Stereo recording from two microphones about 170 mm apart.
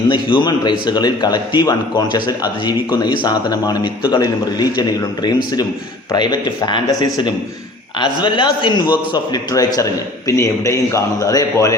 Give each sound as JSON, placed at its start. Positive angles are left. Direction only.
{"t": 0.1, "sound": "a man's voice", "side_deg": 30}